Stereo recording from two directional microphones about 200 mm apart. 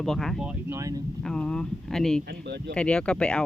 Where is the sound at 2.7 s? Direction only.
5° left (ahead or behind).